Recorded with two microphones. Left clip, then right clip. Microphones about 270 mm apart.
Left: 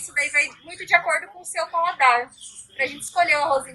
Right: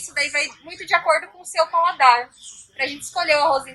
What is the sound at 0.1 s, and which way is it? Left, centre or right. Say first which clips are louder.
A woman's voice: left 1 dB; centre.